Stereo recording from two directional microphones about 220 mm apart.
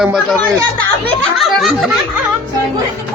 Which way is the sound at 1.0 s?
Centre (ahead or behind).